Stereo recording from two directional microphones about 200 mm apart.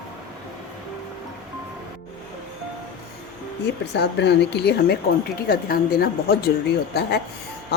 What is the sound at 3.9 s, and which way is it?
A woman's voice, 55° left (ahead or behind).